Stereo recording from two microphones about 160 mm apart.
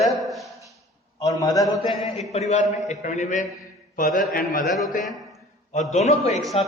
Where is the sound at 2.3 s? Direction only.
45° left (ahead or behind).